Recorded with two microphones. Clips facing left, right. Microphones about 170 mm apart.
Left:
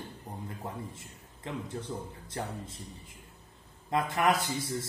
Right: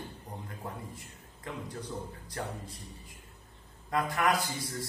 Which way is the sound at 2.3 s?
25° left (ahead or behind).